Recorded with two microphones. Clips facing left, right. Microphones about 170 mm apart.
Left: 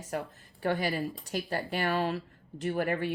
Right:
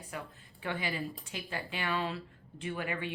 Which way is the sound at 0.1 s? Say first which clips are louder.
Left 9 dB; 40° left (ahead or behind).